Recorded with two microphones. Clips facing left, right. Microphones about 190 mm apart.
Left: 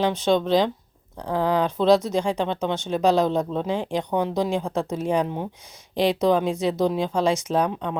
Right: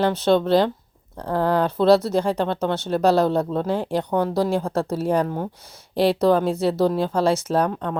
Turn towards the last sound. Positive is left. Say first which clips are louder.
# right 2 dB
turn(degrees=15)  # may be behind; listen again after turning